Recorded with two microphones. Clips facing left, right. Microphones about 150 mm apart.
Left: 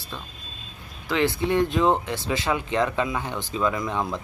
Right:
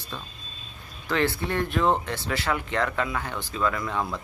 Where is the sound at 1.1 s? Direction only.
15° left (ahead or behind).